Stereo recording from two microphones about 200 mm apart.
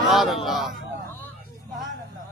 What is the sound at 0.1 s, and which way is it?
Crowd, centre (ahead or behind).